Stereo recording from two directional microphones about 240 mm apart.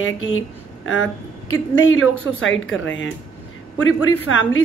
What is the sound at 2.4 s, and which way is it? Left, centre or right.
Speech, left.